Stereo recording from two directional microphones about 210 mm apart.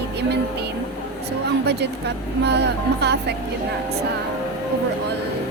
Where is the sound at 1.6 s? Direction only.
50° right (ahead or behind).